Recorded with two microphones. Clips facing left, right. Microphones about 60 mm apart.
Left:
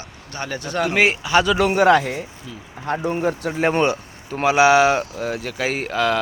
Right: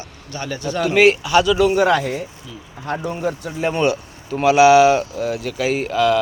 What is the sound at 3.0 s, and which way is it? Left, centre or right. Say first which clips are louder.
Speech: left 2 dB; left.